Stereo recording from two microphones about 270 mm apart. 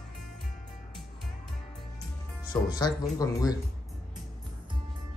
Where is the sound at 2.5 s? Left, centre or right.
Centre.